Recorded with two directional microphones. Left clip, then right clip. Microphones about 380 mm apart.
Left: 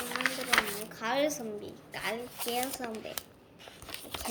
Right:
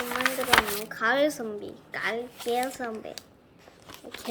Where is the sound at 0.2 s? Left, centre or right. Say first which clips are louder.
Right 6 dB; centre.